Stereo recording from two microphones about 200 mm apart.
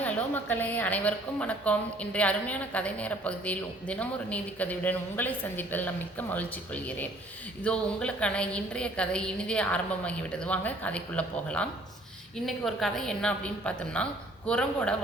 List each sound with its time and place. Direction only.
0.0 s a woman's voice: 10° left (ahead or behind)